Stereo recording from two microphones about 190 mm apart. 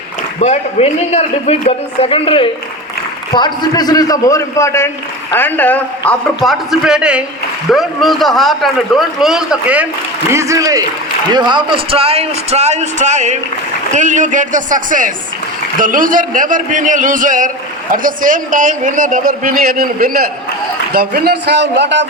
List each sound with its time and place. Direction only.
0.3 s a man's voice: 35° left (ahead or behind); by 22.0 s 65° right (ahead or behind)